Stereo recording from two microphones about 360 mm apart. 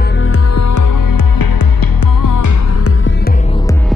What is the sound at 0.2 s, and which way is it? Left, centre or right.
Music, left.